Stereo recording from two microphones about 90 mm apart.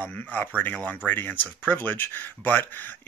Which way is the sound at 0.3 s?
20° left (ahead or behind).